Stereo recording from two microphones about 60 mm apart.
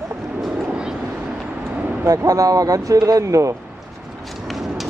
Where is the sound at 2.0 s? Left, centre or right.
Right.